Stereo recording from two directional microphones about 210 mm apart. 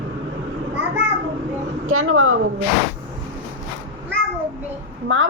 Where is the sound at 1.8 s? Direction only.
85° right.